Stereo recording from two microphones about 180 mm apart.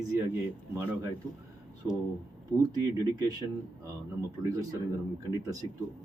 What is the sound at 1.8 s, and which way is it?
Speech, 15° right (ahead or behind).